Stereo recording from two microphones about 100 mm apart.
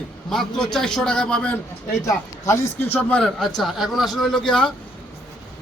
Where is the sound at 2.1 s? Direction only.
30° left (ahead or behind).